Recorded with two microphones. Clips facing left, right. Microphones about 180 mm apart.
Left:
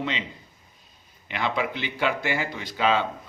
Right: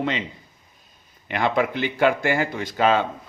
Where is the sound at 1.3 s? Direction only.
50° right (ahead or behind).